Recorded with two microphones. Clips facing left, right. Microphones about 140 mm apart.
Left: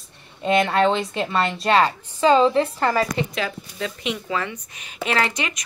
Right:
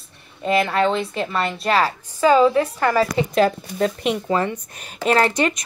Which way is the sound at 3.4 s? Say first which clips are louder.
Right 10 dB; 45° right (ahead or behind).